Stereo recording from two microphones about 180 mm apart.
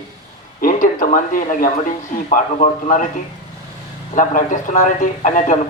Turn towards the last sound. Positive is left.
turn(degrees=45)  # may be behind; listen again after turning